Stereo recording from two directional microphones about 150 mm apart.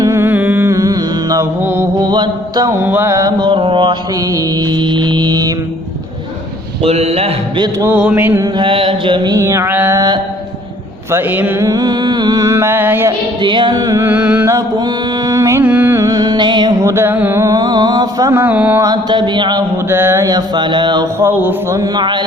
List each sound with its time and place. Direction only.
0.0 s music: 20° right (ahead or behind)
1.6 s mantra: 15° right (ahead or behind)
2.0 s mantra: 25° right (ahead or behind)
6.8 s a man's voice: 45° right (ahead or behind)
7.9 s mantra: 10° right (ahead or behind)
8.5 s mantra: 35° right (ahead or behind); by 13.1 s 15° right (ahead or behind)
13.4 s mantra: 30° right (ahead or behind)
16.8 s mantra: 15° right (ahead or behind)
18.8 s mantra: 25° right (ahead or behind)
19.9 s mantra: 15° right (ahead or behind)
21.8 s mantra: 30° right (ahead or behind)